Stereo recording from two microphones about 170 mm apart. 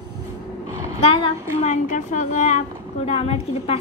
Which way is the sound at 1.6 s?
45° left (ahead or behind).